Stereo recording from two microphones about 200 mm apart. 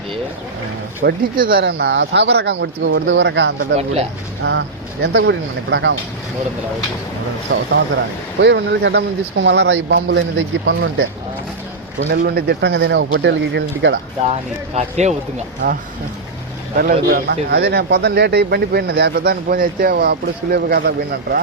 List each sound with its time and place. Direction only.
1.0 s speech: 45° right (ahead or behind); by 3.5 s 65° right (ahead or behind)
3.6 s speech: 30° right (ahead or behind)
4.4 s speech: 55° right (ahead or behind)
7.5 s speech: 65° right (ahead or behind)
12.1 s speech: 50° right (ahead or behind)
14.8 s speech: 35° right (ahead or behind)
16.7 s speech: 50° right (ahead or behind)